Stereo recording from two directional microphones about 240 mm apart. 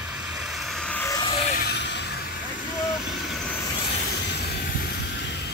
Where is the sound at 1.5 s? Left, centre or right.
Left.